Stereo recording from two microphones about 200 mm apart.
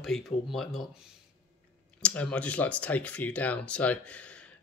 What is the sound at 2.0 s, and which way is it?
Speech, 5° left (ahead or behind).